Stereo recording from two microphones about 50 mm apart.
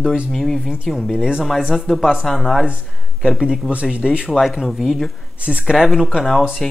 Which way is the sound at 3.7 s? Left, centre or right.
Right.